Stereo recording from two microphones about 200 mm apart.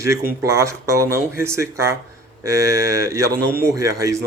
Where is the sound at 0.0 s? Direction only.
15° right (ahead or behind).